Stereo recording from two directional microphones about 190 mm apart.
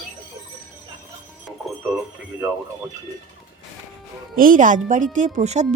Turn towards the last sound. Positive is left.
turn(degrees=-35)  # may be behind; listen again after turning